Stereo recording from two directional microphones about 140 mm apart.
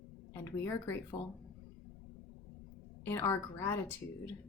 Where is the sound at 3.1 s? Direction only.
15° left (ahead or behind).